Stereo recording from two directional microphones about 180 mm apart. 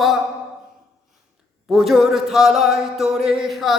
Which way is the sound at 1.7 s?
Centre (ahead or behind).